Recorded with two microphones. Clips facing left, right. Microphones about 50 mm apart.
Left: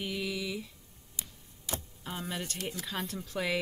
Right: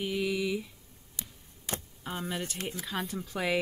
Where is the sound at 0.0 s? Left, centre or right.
Centre.